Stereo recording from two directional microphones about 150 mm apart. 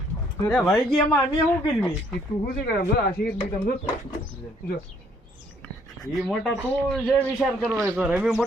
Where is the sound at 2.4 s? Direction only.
90° left.